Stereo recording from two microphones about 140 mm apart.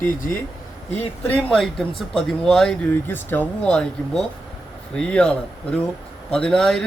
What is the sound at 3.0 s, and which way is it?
A man's voice, 15° left (ahead or behind).